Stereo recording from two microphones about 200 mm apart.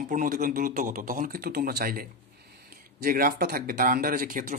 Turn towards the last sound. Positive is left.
turn(degrees=-45)  # may be behind; listen again after turning